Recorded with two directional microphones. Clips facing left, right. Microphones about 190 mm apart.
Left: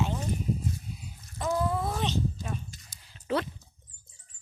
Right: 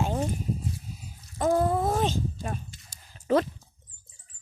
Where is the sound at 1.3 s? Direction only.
45° right (ahead or behind).